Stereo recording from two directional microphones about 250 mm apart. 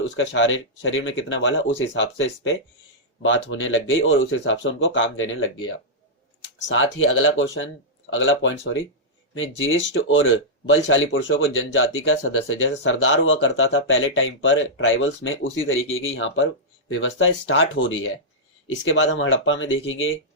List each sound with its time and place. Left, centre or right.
0.2 s speech: left